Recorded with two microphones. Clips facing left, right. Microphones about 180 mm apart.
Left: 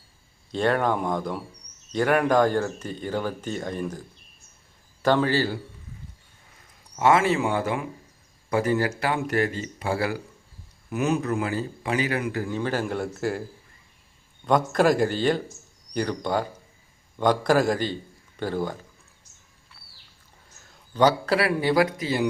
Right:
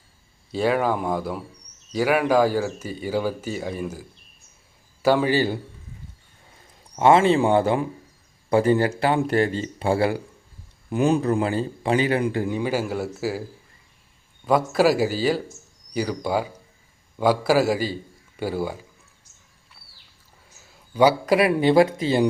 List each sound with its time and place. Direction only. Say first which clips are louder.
0.5 s a man's voice: right 1 dB; 5° right (ahead or behind)
5.0 s speech: right 2 dB; 10° right (ahead or behind)
6.9 s a man's voice: right 4 dB; 25° right (ahead or behind)
12.5 s a man's voice: right 2 dB; 10° right (ahead or behind)
14.4 s a man's voice: right 2 dB; 5° right (ahead or behind)
19.8 s a sound: right 1 dB; 10° right (ahead or behind)
20.6 s speech: right 3 dB; 10° right (ahead or behind); by 22.3 s 25° right (ahead or behind)